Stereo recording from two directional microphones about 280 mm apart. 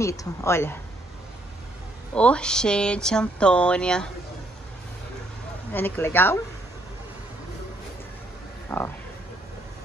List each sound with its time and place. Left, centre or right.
0.0 s speech: centre
2.1 s speech: centre
5.7 s speech: centre
8.6 s speech: centre